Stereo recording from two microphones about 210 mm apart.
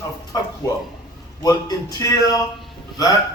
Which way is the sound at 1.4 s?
20° left (ahead or behind).